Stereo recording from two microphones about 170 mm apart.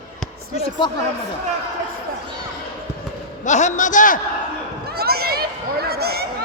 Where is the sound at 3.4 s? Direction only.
45° left (ahead or behind).